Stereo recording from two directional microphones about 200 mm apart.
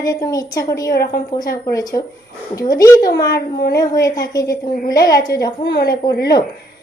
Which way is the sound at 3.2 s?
50° left (ahead or behind).